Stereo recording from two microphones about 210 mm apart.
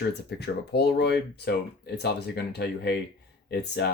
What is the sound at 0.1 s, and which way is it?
Speech, 55° left (ahead or behind).